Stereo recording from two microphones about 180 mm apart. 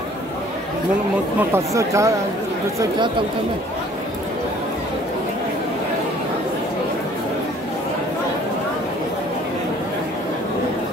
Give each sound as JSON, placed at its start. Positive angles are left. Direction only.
{"t": 1.5, "sound": "speech", "side_deg": -15}